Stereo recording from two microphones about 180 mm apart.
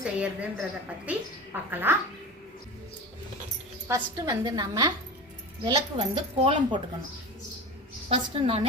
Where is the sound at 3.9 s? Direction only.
20° right (ahead or behind).